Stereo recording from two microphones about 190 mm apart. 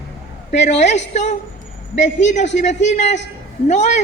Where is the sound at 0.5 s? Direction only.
35° left (ahead or behind).